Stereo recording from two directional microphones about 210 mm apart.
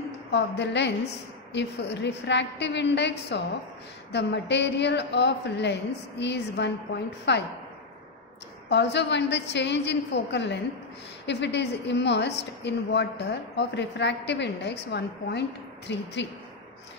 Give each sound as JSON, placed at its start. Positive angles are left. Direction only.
{"t": 0.3, "sound": "a woman's voice", "side_deg": 55}
{"t": 8.6, "sound": "a woman's voice", "side_deg": 55}